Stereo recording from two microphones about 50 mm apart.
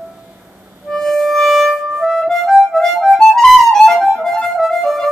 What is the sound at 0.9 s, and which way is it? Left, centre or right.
Harmonica, centre.